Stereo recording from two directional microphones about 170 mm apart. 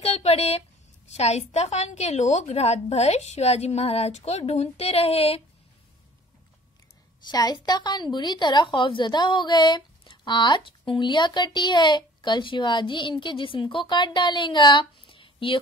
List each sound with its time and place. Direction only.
0.0 s a woman's voice: 35° left (ahead or behind)
7.2 s a woman's voice: 25° left (ahead or behind)